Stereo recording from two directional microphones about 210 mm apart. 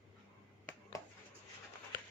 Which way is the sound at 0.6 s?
10° left (ahead or behind).